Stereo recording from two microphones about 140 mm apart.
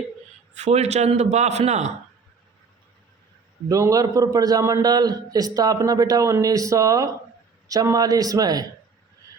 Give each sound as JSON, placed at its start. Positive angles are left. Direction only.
{"t": 0.5, "sound": "a man's voice", "side_deg": -50}
{"t": 3.7, "sound": "a man's voice", "side_deg": -25}